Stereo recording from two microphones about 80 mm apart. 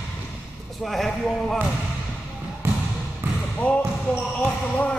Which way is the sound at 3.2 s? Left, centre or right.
Right.